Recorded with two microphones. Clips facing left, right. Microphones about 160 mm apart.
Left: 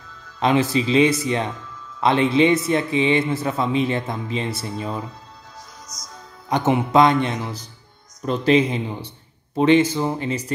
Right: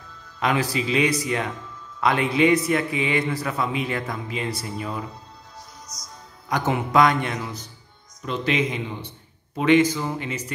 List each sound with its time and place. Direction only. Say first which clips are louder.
0.4 s a man's voice: left 5 dB; 25° left (ahead or behind)
5.9 s speech: left 2 dB; 90° left
6.5 s a man's voice: left 4 dB; 25° left (ahead or behind)